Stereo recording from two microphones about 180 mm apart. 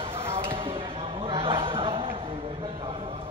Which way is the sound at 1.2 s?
30° right (ahead or behind).